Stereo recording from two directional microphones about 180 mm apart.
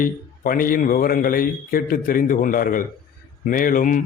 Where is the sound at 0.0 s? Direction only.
50° left (ahead or behind).